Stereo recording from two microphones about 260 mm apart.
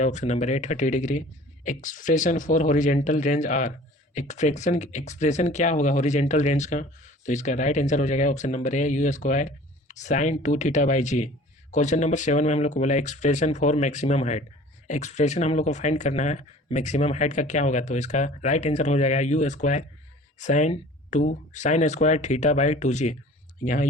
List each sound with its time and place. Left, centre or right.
0.0 s speech: left